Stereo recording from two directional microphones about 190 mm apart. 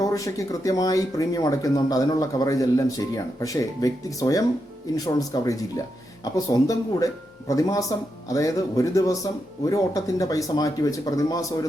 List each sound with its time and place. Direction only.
0.0 s speech: 15° left (ahead or behind)